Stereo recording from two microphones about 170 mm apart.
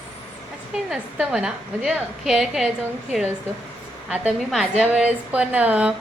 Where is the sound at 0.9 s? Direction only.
5° right (ahead or behind).